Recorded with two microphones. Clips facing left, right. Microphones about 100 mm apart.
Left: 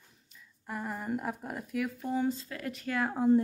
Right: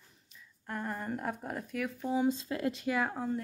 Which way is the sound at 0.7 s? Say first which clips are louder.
Left 1 dB; 5° left (ahead or behind).